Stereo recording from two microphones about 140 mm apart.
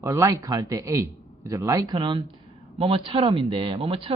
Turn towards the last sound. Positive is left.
turn(degrees=-40)  # may be behind; listen again after turning